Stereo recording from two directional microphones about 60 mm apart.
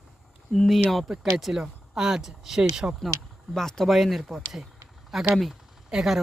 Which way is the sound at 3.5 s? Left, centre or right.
Centre.